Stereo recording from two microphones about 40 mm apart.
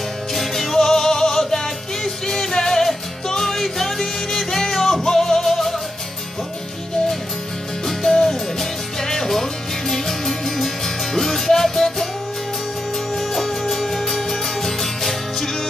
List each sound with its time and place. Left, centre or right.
0.3 s music: centre
7.8 s music: centre
13.1 s music: centre